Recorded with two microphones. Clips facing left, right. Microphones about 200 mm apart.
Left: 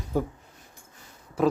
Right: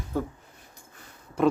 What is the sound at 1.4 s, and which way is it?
Pig, centre (ahead or behind).